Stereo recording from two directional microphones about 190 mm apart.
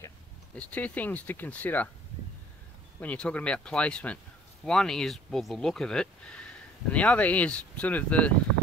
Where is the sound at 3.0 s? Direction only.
5° left (ahead or behind).